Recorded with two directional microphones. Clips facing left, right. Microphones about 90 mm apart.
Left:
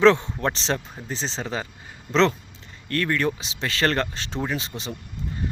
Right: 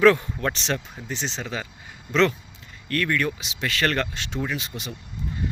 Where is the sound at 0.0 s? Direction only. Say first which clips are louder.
Left 1 dB; 25° left (ahead or behind).